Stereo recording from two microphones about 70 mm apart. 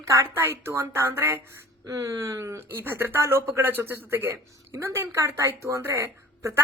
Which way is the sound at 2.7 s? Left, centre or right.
Right.